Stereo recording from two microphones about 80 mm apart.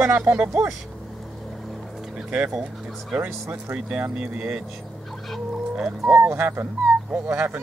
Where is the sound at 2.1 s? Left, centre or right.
Centre.